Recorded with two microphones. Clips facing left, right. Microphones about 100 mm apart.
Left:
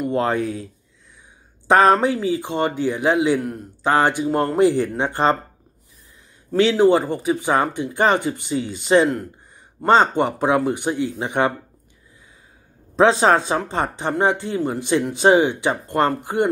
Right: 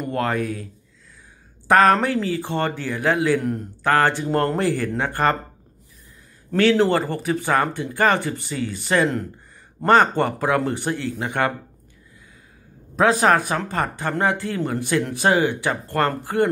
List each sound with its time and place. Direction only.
0.1 s speech: 25° left (ahead or behind)
1.7 s speech: 20° left (ahead or behind)
6.5 s speech: 15° left (ahead or behind)
12.9 s speech: 25° left (ahead or behind)